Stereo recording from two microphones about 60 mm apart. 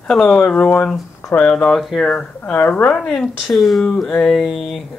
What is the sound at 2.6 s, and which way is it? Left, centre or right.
Speech, left.